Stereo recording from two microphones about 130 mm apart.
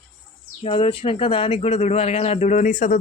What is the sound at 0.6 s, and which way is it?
Speech, 45° left (ahead or behind).